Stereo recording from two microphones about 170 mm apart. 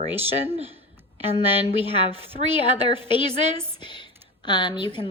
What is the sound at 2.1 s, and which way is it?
Speech, 35° right (ahead or behind).